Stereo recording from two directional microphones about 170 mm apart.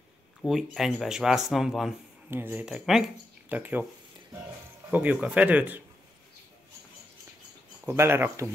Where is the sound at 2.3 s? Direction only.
15° right (ahead or behind).